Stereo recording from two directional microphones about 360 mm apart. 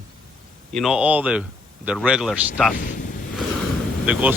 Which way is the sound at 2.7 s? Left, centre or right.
Left.